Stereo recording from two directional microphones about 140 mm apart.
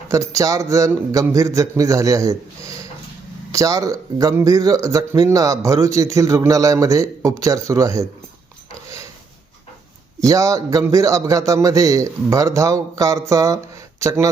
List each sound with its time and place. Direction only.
0.1 s a man's voice: 25° right (ahead or behind)
10.2 s a man's voice: 25° right (ahead or behind)